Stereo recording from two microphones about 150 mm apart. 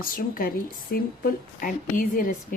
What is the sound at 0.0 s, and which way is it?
Speech, 70° left (ahead or behind).